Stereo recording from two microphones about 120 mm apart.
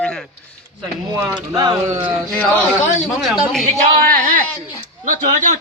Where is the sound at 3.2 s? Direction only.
Centre (ahead or behind).